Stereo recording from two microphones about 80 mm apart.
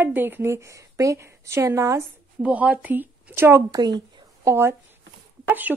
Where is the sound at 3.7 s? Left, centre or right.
Right.